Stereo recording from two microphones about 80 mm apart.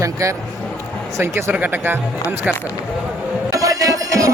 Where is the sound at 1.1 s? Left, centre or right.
Right.